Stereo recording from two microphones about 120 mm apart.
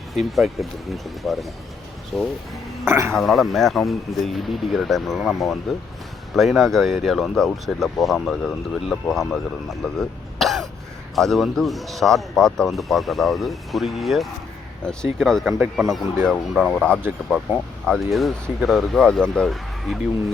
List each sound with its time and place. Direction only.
0.1 s speech: centre (ahead or behind)
2.8 s a man's voice: 20° right (ahead or behind)
3.1 s speech: centre (ahead or behind)